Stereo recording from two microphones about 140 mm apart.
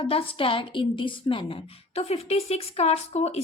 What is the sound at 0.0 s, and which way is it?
A woman's voice, 40° left (ahead or behind).